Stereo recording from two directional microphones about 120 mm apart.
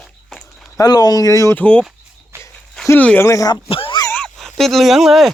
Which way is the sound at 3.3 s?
30° left (ahead or behind).